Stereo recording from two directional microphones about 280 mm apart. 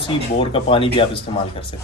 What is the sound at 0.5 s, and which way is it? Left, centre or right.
Speech, centre.